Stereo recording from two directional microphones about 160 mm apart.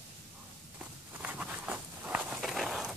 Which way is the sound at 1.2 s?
10° right (ahead or behind).